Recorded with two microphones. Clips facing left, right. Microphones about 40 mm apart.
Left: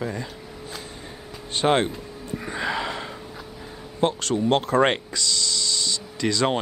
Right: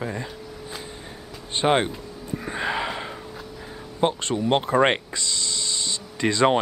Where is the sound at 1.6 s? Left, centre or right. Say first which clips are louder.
Even; centre.